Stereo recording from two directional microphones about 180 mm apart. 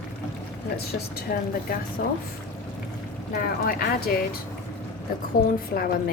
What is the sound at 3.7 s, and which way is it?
Speech, 55° left (ahead or behind).